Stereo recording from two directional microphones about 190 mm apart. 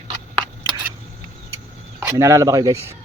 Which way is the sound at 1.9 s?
15° right (ahead or behind).